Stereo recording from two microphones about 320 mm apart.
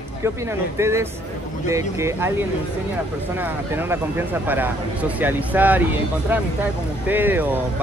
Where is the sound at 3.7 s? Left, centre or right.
Centre.